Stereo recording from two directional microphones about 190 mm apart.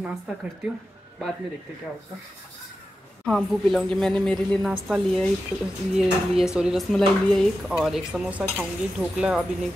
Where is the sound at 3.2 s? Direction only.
Centre (ahead or behind).